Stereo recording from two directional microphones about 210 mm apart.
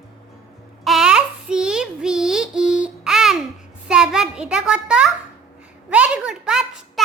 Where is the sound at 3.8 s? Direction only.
5° right (ahead or behind).